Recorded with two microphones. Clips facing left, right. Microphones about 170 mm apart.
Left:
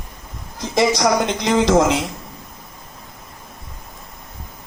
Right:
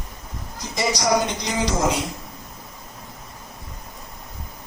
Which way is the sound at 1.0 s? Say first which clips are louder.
Left 3 dB; 65° left (ahead or behind).